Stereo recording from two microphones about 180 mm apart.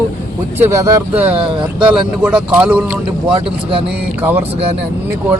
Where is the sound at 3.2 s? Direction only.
30° right (ahead or behind).